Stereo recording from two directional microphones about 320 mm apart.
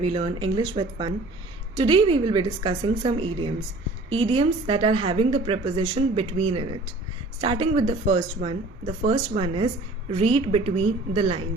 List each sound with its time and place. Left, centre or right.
0.0 s a woman's voice: centre